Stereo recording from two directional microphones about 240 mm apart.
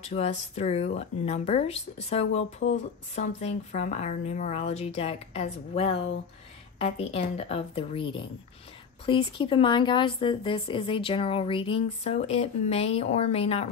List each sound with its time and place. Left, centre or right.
0.0 s a woman's voice: left